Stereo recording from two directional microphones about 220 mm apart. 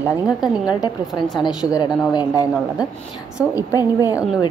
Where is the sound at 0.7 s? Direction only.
20° left (ahead or behind).